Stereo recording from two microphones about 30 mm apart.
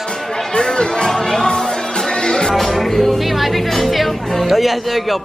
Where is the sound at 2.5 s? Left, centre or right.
Centre.